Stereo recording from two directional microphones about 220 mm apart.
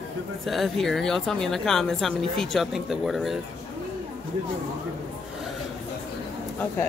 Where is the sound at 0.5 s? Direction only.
Centre (ahead or behind).